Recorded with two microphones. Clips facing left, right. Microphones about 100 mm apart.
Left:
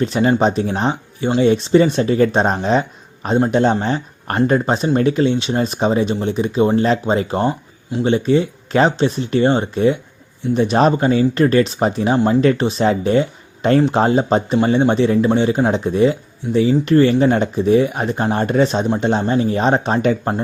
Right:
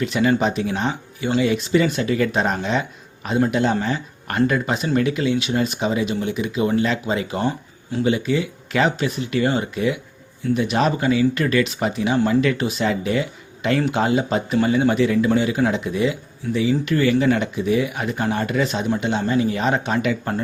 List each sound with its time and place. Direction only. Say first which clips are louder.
0.0 s speech: left 4 dB; 35° left (ahead or behind)